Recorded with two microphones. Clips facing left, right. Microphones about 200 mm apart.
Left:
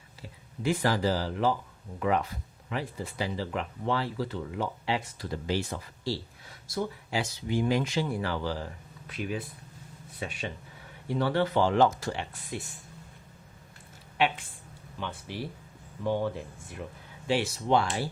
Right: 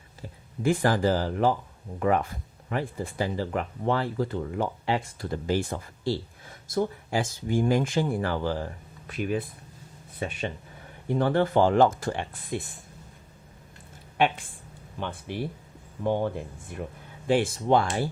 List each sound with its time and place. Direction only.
0.2 s speech: 50° right (ahead or behind)
14.2 s speech: 50° right (ahead or behind)